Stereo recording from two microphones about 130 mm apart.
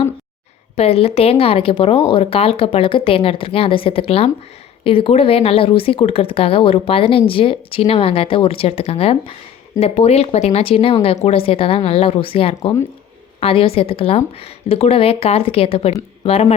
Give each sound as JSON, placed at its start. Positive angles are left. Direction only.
{"t": 0.8, "sound": "speech", "side_deg": 50}